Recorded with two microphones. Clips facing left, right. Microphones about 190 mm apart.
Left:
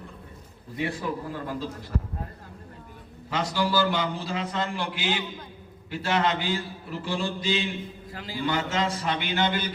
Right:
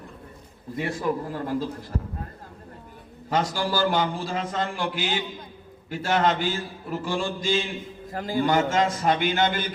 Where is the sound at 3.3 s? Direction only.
45° right (ahead or behind).